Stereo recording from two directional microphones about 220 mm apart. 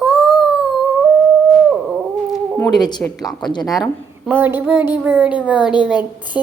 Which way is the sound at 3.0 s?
Centre (ahead or behind).